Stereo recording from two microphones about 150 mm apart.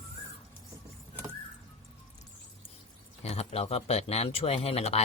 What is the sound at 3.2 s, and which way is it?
Speech, 45° left (ahead or behind).